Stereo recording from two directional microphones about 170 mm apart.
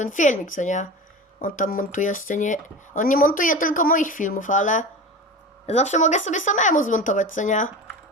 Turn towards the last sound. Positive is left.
turn(degrees=45)  # may be behind; listen again after turning